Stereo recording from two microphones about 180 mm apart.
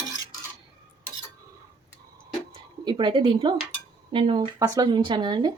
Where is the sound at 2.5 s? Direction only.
25° right (ahead or behind).